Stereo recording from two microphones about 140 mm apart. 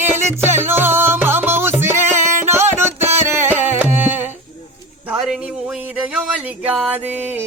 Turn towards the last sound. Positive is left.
turn(degrees=-10)  # may be behind; listen again after turning